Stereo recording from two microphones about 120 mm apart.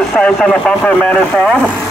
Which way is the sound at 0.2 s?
5° left (ahead or behind).